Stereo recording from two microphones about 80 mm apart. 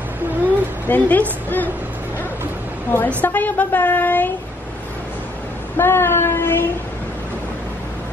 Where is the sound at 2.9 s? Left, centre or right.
Left.